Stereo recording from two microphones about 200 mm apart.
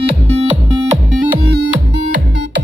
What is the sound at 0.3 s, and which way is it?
Music, 30° right (ahead or behind).